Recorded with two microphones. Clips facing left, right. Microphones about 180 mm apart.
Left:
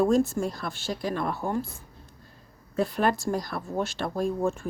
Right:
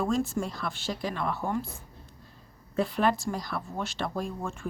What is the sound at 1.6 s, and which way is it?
Speech, 10° left (ahead or behind).